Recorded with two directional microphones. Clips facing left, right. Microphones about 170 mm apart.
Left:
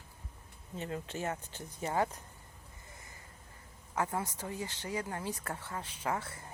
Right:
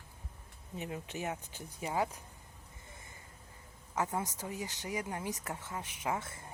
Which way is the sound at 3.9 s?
20° right (ahead or behind).